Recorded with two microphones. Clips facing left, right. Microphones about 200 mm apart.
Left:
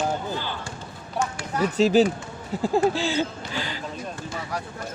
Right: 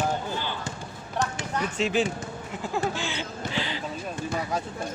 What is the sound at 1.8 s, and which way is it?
Speech, 35° left (ahead or behind).